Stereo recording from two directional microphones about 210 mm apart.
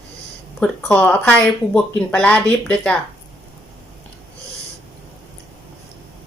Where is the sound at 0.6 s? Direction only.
5° left (ahead or behind).